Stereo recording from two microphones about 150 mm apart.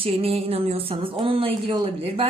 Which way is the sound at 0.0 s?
40° right (ahead or behind).